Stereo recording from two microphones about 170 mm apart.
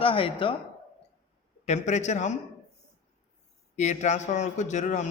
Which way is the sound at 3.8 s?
45° left (ahead or behind).